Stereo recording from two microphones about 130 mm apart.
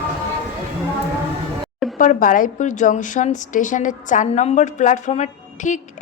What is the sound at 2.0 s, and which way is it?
A woman's voice, 90° left.